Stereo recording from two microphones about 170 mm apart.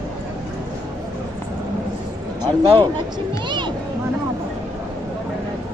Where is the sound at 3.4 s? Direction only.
25° right (ahead or behind).